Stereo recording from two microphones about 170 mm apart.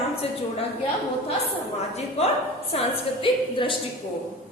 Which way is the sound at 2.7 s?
35° left (ahead or behind).